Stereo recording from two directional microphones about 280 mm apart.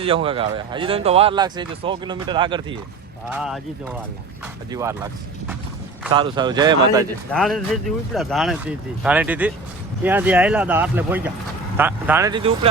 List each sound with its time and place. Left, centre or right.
0.0 s speech: centre
3.2 s speech: centre
4.7 s speech: centre
6.1 s speech: centre
7.3 s speech: centre